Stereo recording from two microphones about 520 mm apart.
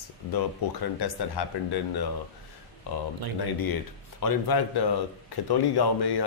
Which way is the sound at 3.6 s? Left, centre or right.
Left.